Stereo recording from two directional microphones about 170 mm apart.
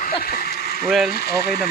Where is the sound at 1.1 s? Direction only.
65° left (ahead or behind).